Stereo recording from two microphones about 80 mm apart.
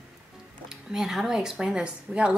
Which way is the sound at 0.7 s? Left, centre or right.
Centre.